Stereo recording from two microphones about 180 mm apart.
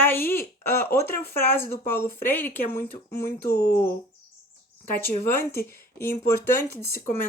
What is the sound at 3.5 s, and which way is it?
Speech, 55° left (ahead or behind).